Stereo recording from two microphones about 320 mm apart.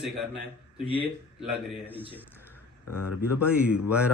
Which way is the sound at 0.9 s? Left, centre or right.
Centre.